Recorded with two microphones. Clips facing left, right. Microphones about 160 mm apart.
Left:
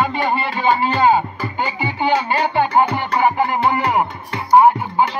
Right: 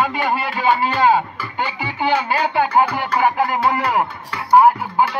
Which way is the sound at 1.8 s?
5° right (ahead or behind).